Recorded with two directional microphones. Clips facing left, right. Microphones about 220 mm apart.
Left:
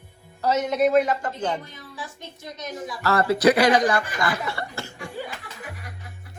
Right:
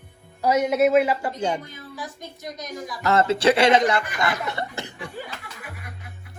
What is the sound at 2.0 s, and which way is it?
Speech, 30° left (ahead or behind).